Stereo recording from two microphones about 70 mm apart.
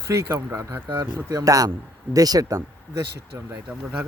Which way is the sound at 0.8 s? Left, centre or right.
Right.